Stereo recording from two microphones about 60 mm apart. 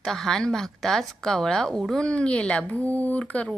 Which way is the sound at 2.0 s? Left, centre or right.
Centre.